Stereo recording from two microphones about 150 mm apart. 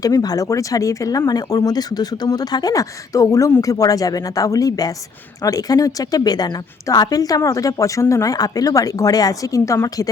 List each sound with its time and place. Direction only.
0.0 s speech: 25° left (ahead or behind)